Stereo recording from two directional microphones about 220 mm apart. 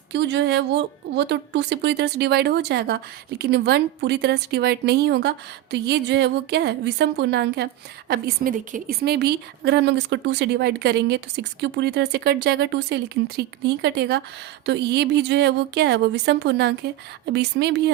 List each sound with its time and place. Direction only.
0.1 s a woman's voice: 50° right (ahead or behind)